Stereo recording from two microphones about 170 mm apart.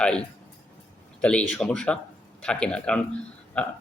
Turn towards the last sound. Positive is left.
turn(degrees=5)  # may be behind; listen again after turning